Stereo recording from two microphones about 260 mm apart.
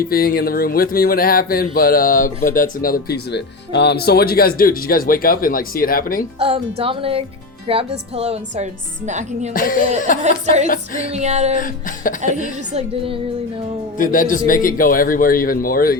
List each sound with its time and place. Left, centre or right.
0.0 s speech: left
6.4 s a woman's voice: right
9.5 s speech: left
11.1 s a woman's voice: right
11.6 s speech: left
14.0 s speech: left